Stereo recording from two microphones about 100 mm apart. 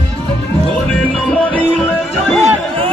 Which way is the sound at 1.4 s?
15° left (ahead or behind).